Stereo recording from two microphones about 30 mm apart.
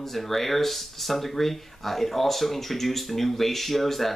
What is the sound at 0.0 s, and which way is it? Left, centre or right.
Speech, centre.